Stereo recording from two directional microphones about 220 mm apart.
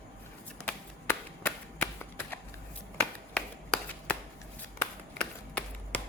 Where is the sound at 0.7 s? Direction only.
5° left (ahead or behind).